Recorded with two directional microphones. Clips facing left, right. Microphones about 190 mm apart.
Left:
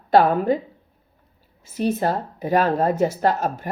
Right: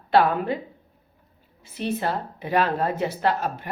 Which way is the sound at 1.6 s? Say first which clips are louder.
Left 5 dB; 40° left (ahead or behind).